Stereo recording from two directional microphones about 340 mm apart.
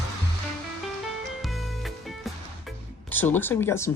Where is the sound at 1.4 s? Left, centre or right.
Centre.